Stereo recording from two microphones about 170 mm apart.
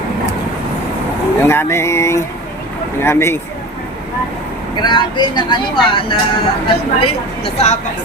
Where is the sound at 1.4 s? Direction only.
15° left (ahead or behind).